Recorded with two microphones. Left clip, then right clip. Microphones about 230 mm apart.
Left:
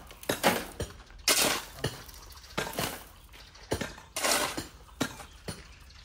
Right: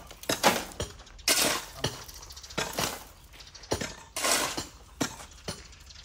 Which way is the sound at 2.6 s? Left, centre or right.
Centre.